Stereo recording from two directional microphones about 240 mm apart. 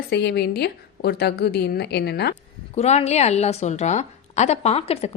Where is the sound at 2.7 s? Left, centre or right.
Left.